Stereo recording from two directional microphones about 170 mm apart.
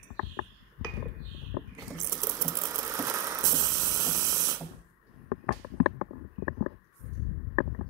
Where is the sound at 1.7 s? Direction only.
20° right (ahead or behind).